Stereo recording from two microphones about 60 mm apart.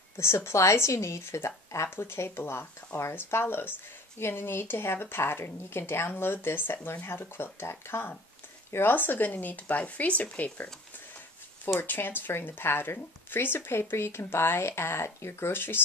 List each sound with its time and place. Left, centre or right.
0.2 s speech: left
11.6 s speech: left